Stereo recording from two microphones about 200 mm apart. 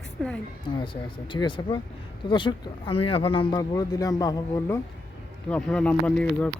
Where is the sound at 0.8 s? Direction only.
25° left (ahead or behind).